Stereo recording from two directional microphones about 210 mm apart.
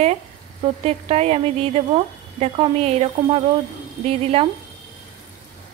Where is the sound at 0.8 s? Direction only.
30° right (ahead or behind).